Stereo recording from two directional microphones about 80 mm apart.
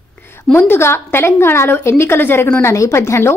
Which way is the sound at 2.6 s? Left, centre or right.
Left.